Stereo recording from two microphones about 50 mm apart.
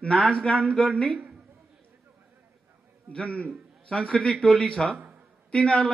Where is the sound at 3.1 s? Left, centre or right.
Left.